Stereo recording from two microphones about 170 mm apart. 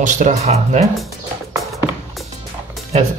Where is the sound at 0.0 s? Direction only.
45° right (ahead or behind).